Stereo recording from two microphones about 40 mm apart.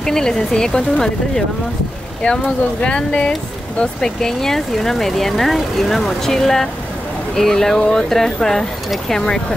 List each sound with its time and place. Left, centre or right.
0.0 s speech: centre
4.2 s speech: centre